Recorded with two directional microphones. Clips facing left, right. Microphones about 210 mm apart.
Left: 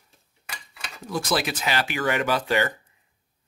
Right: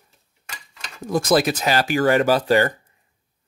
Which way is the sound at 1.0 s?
45° right (ahead or behind).